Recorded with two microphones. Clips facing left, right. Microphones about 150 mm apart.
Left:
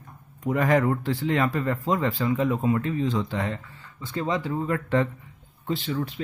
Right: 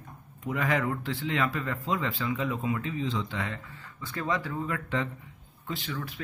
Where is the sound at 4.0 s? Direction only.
25° left (ahead or behind).